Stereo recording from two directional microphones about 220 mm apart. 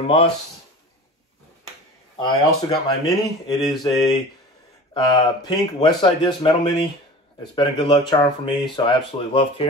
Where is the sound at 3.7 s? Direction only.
20° left (ahead or behind).